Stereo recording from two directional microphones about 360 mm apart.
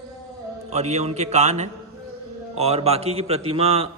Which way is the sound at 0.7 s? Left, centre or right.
Centre.